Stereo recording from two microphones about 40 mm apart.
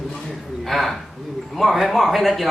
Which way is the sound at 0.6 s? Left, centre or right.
Centre.